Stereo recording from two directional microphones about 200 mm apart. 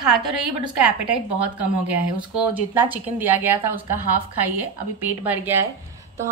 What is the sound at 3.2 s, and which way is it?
Speech, 10° right (ahead or behind).